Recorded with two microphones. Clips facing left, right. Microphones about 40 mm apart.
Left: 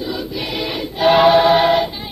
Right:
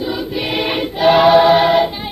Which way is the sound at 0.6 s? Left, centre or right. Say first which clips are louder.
Right 5 dB; right.